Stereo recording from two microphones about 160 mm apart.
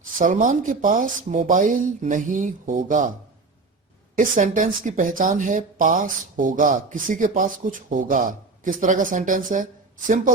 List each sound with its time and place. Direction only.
0.2 s speech: 55° right (ahead or behind)
4.2 s speech: 55° right (ahead or behind)